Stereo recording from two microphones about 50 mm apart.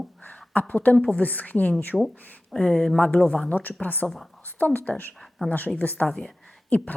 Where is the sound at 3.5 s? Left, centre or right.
Left.